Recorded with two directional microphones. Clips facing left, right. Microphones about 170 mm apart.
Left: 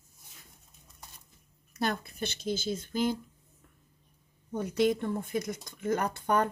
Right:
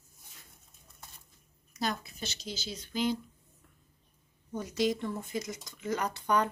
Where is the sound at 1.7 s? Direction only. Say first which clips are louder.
Left 3 dB; 55° left (ahead or behind).